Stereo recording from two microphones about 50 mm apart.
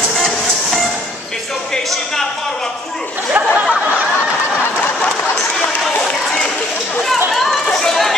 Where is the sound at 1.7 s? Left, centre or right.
Centre.